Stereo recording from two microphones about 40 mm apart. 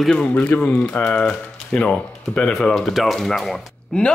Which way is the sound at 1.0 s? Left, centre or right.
Left.